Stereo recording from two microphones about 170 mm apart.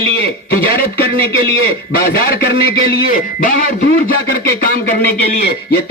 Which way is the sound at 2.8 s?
55° left (ahead or behind).